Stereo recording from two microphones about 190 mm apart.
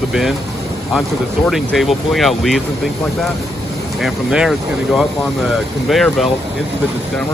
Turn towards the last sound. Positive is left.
turn(degrees=0)  # may be behind; listen again after turning